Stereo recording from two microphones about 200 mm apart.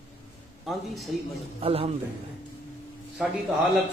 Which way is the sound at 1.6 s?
30° right (ahead or behind).